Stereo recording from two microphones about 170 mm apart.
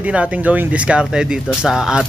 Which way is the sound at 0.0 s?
10° right (ahead or behind).